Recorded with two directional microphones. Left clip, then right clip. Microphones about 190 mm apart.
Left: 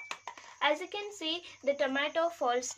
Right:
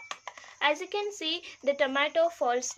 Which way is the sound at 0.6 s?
35° right (ahead or behind).